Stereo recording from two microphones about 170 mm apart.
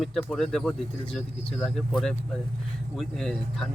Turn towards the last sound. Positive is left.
turn(degrees=0)  # may be behind; listen again after turning